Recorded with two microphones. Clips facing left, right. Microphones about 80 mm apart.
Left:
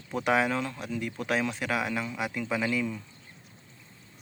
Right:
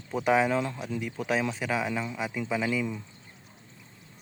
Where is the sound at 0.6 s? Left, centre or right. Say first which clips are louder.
Right 1 dB; centre.